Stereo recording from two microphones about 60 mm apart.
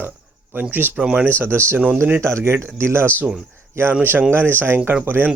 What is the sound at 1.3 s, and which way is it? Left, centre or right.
Speech, right.